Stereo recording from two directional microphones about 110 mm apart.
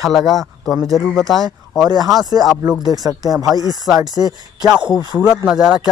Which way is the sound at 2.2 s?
35° right (ahead or behind).